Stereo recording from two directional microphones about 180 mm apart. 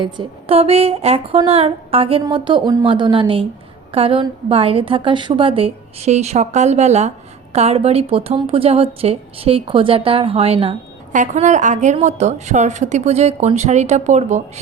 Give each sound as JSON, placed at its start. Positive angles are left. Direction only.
{"t": 0.0, "sound": "a woman's voice", "side_deg": -30}